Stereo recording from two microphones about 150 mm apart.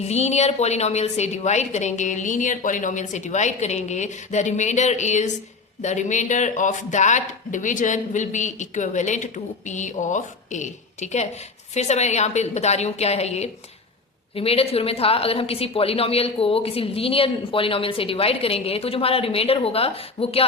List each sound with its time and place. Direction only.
0.0 s a woman's voice: 45° left (ahead or behind)